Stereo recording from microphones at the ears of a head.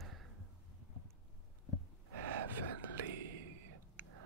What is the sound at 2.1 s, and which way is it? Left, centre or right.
Whispering, right.